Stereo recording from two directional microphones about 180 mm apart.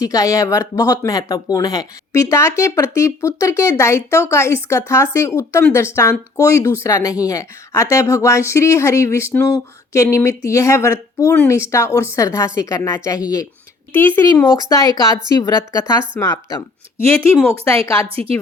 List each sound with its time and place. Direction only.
0.0 s a woman's voice: 20° left (ahead or behind)
18.1 s a woman's voice: 30° right (ahead or behind)